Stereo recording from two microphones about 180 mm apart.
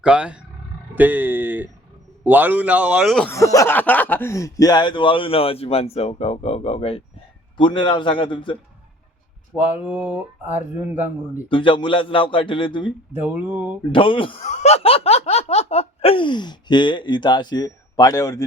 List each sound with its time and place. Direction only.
0.0 s speech: 5° right (ahead or behind)
3.3 s speech: 15° left (ahead or behind)
9.6 s speech: 10° right (ahead or behind)
11.4 s speech: 30° left (ahead or behind)
13.1 s speech: 10° right (ahead or behind)
13.9 s speech: 30° left (ahead or behind)